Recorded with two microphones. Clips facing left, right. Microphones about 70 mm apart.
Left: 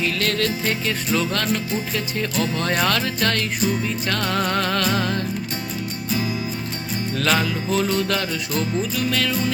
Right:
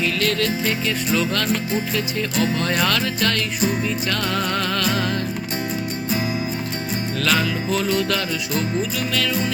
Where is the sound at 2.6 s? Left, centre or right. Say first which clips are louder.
Even; left.